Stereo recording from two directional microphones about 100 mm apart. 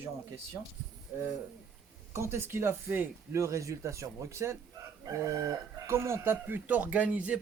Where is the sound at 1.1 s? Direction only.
15° right (ahead or behind).